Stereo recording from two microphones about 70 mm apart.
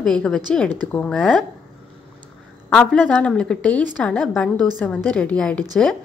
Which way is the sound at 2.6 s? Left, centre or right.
Left.